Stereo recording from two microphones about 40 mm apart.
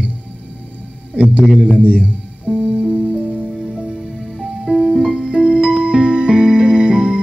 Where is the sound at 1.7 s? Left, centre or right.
Right.